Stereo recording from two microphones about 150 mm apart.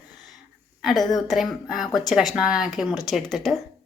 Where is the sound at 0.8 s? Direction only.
Centre (ahead or behind).